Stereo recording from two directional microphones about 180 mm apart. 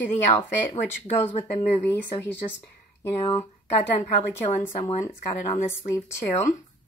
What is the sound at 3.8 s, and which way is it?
Speech, 10° left (ahead or behind).